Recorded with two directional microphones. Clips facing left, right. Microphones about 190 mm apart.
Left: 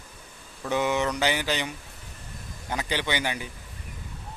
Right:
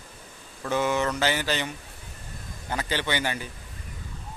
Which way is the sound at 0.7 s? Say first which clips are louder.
Even; 15° left (ahead or behind).